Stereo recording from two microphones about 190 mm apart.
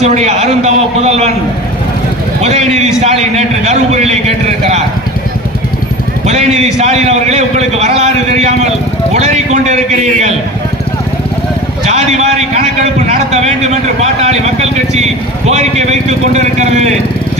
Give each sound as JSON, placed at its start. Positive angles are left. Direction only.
{"t": 0.0, "sound": "a man's voice", "side_deg": -35}
{"t": 2.4, "sound": "a man's voice", "side_deg": -35}
{"t": 6.7, "sound": "a man's voice", "side_deg": -35}
{"t": 11.9, "sound": "a man's voice", "side_deg": -35}